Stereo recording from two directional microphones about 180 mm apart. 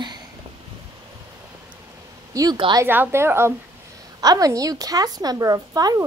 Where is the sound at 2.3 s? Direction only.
20° right (ahead or behind).